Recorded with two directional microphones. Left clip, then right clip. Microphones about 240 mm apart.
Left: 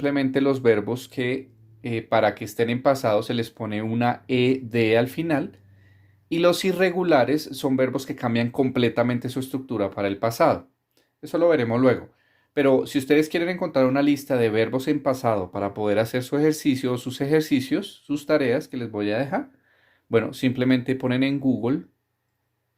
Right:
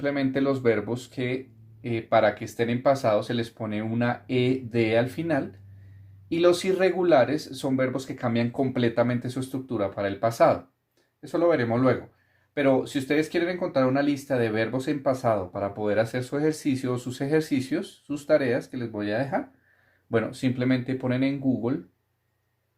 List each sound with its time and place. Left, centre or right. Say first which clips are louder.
0.0 s speech: left 3 dB; left